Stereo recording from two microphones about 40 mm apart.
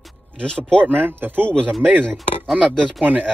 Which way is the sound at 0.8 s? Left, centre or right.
Right.